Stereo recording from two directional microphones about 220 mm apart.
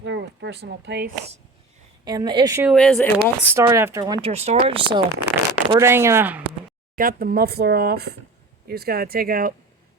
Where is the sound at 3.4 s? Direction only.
10° right (ahead or behind).